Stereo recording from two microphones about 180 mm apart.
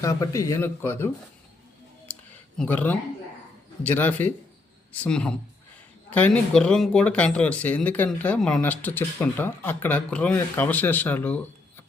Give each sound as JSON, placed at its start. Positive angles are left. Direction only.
{"t": 0.0, "sound": "speech", "side_deg": 20}
{"t": 2.0, "sound": "a sound", "side_deg": 10}
{"t": 3.8, "sound": "a man's voice", "side_deg": 10}